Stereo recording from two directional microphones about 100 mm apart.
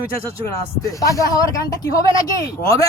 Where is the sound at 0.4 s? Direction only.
35° left (ahead or behind).